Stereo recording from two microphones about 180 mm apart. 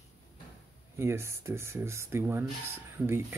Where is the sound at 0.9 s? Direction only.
15° right (ahead or behind).